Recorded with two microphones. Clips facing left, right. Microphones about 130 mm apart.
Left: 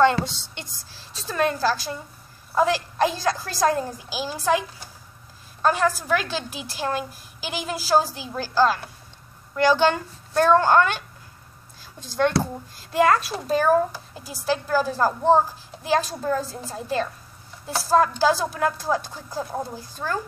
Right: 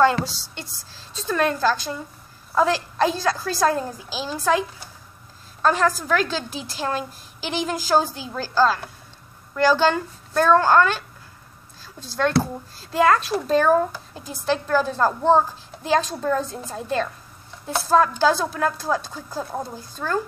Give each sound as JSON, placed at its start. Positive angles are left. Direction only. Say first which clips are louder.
{"t": 0.1, "sound": "a woman's voice", "louder": "even", "side_deg": -5}
{"t": 0.4, "sound": "a woman's voice", "louder": "right 2 dB", "side_deg": 15}
{"t": 12.9, "sound": "speech", "louder": "right 1 dB", "side_deg": 10}